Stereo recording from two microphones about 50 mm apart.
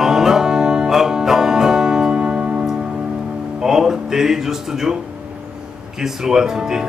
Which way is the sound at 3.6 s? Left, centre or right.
Centre.